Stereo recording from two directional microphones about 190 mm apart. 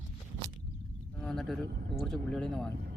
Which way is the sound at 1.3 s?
Centre (ahead or behind).